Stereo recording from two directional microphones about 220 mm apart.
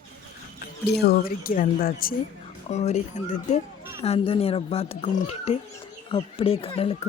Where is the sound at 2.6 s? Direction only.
30° left (ahead or behind).